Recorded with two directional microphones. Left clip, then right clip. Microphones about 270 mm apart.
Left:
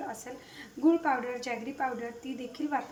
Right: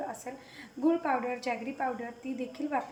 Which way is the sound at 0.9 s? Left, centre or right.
Centre.